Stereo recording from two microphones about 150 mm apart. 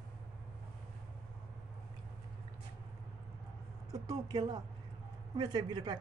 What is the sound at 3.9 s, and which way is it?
Speech, 25° right (ahead or behind).